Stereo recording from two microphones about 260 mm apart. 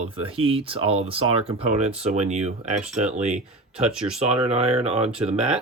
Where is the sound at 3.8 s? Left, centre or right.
Centre.